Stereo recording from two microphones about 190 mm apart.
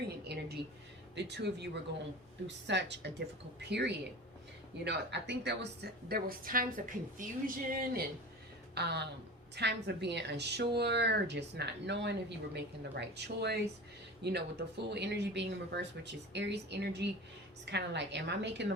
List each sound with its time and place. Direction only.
0.3 s a sound: 60° right (ahead or behind)
1.1 s a woman's voice: 65° right (ahead or behind); by 8.0 s 50° right (ahead or behind)
8.7 s a woman's voice: 60° right (ahead or behind)